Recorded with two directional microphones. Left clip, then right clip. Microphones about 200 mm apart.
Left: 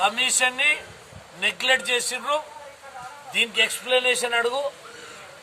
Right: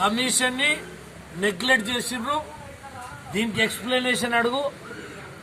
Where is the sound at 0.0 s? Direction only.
30° left (ahead or behind).